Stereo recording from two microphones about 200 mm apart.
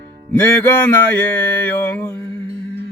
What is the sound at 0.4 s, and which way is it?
Music, 10° left (ahead or behind).